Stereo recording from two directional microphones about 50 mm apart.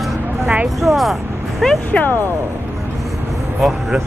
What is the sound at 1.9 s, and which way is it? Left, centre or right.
Speech, left.